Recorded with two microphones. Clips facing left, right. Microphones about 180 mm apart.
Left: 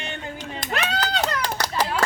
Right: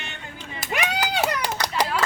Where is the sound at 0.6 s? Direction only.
10° right (ahead or behind).